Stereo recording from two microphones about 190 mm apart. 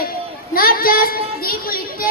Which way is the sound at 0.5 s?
50° left (ahead or behind).